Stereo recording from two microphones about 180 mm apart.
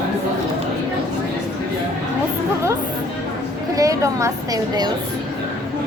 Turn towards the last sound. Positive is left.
turn(degrees=-20)  # may be behind; listen again after turning